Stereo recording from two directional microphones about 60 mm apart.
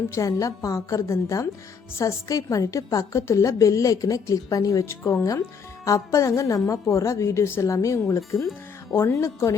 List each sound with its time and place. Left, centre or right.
0.1 s a woman's voice: left